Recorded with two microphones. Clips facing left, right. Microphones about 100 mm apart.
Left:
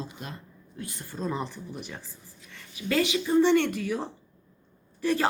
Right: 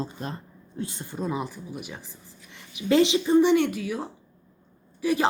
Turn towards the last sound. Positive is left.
turn(degrees=-10)  # may be behind; listen again after turning